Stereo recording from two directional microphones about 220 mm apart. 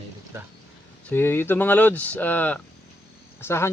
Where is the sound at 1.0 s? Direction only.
10° left (ahead or behind).